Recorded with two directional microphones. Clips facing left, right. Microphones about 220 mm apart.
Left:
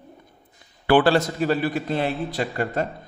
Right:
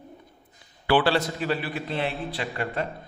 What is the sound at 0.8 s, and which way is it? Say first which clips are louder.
A man's voice: left 4 dB; 50° left (ahead or behind).